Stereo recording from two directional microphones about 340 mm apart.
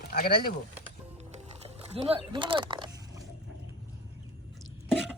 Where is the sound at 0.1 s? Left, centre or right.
Left.